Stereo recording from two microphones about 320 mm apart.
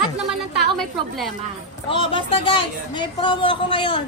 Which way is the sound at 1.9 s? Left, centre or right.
Centre.